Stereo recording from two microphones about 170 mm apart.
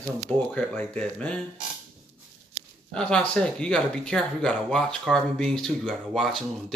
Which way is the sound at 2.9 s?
5° left (ahead or behind).